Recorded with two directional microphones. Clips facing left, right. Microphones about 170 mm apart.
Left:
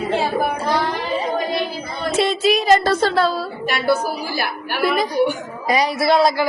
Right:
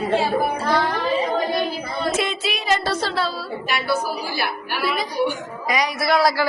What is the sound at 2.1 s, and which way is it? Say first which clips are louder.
A woman's voice: left 8 dB; 35° left (ahead or behind).